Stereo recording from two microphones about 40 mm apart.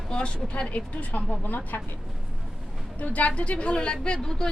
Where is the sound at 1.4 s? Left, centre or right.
Left.